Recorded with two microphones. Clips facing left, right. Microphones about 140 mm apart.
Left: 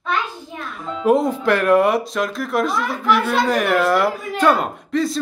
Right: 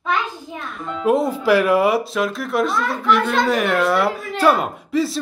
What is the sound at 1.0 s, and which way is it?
Speech, centre (ahead or behind).